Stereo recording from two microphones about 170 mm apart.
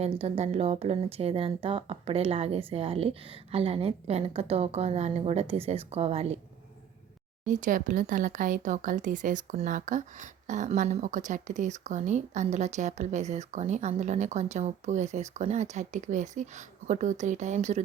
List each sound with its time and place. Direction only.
0.0 s speech: 35° right (ahead or behind)
7.4 s speech: 50° right (ahead or behind)